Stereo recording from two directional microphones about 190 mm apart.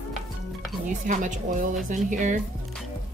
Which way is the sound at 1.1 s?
40° right (ahead or behind).